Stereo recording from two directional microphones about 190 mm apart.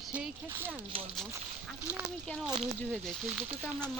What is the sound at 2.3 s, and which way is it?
Speech, centre (ahead or behind).